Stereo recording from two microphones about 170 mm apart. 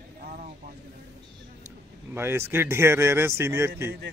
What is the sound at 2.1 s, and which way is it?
Speech, 15° right (ahead or behind).